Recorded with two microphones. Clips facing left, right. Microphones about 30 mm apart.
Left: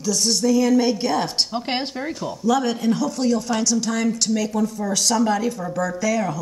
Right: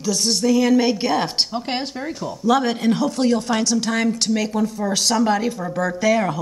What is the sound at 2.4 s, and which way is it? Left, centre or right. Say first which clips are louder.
Speech: right 2 dB; right.